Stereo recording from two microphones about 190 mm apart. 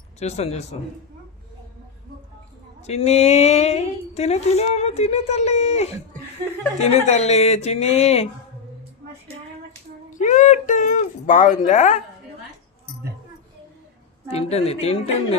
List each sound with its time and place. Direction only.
0.2 s speech: 35° left (ahead or behind)
2.8 s speech: 35° left (ahead or behind)
10.2 s speech: 40° left (ahead or behind)
14.3 s speech: 35° left (ahead or behind)